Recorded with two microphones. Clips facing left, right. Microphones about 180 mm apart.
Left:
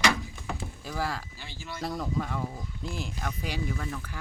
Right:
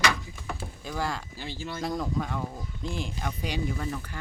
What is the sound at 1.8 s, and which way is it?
Speech, centre (ahead or behind).